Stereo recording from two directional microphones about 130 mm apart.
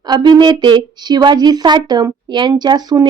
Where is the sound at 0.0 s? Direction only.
35° right (ahead or behind).